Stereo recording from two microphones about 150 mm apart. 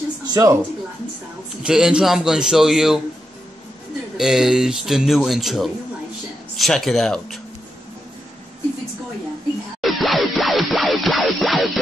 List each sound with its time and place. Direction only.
0.3 s speech: 25° right (ahead or behind)
1.6 s speech: 5° right (ahead or behind)
4.2 s speech: 5° right (ahead or behind)
9.8 s music: centre (ahead or behind)